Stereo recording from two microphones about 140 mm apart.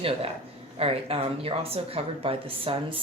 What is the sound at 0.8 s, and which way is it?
Speech, 45° right (ahead or behind).